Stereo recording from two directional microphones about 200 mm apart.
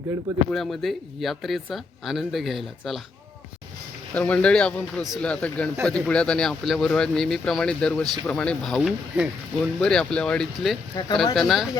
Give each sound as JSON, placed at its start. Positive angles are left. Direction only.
{"t": 0.5, "sound": "speech", "side_deg": 0}
{"t": 4.1, "sound": "speech", "side_deg": 5}
{"t": 11.0, "sound": "speech", "side_deg": 20}
{"t": 11.3, "sound": "speech", "side_deg": 0}